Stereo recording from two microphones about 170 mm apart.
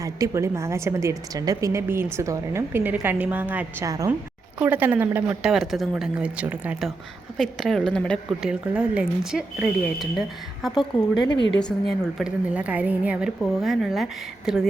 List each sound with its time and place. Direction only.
0.0 s a woman's voice: 20° right (ahead or behind)
4.6 s a woman's voice: 10° right (ahead or behind)
10.9 s speech: 25° left (ahead or behind)
11.5 s a woman's voice: 5° left (ahead or behind)